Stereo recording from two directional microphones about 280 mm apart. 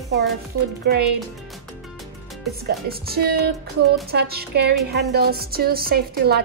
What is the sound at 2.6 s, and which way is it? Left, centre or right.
A woman's voice, right.